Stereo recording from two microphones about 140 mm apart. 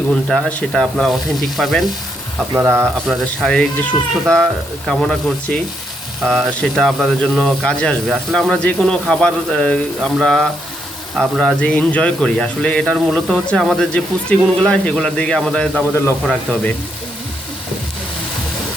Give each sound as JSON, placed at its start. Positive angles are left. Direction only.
{"t": 0.1, "sound": "speech", "side_deg": 5}
{"t": 2.6, "sound": "speech", "side_deg": -15}
{"t": 3.1, "sound": "speech", "side_deg": 5}